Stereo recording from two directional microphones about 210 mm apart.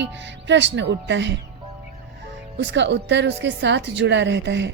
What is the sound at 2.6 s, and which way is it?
Speech, 60° right (ahead or behind).